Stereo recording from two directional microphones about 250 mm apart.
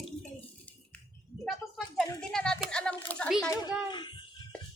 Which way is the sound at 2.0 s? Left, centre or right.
Centre.